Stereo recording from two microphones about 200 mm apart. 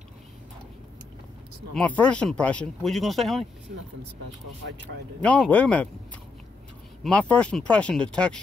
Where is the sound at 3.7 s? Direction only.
50° right (ahead or behind).